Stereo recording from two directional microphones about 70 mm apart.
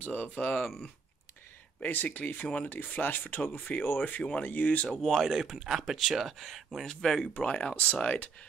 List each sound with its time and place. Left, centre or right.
0.0 s speech: left
1.8 s speech: left
5.0 s speech: centre